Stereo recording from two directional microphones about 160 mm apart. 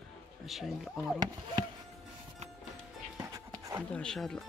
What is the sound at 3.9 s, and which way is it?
Speech, 5° left (ahead or behind).